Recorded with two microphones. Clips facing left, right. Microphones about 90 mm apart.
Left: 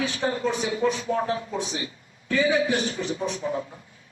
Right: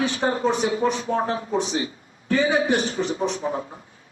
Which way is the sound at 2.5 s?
55° right (ahead or behind).